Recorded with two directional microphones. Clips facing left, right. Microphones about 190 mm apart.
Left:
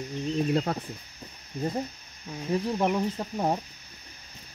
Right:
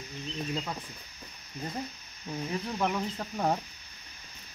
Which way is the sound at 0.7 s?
65° left (ahead or behind).